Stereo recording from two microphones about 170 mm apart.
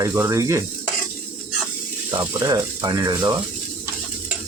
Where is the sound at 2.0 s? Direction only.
25° right (ahead or behind).